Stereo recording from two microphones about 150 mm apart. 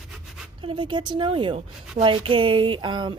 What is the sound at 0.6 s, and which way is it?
Speech, 35° right (ahead or behind).